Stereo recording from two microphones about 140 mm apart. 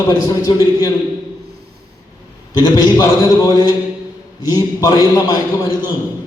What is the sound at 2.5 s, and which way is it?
A man's voice, 30° left (ahead or behind).